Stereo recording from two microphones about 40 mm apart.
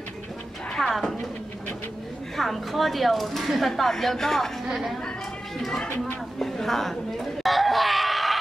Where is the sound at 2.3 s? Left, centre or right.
Centre.